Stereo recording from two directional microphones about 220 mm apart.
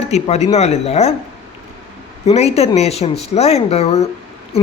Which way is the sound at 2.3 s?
30° left (ahead or behind).